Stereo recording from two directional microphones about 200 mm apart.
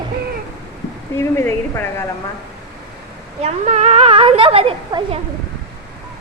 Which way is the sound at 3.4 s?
35° right (ahead or behind).